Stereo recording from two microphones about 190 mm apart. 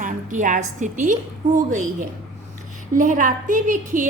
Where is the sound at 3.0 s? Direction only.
45° right (ahead or behind).